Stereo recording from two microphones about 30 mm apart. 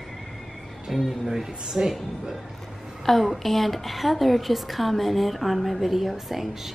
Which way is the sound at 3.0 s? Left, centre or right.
Centre.